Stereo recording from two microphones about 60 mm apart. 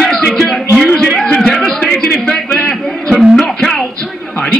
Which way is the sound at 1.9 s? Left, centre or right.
Centre.